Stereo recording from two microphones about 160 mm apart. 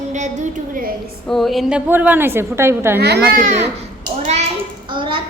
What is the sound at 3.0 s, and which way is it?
Speech, 90° right.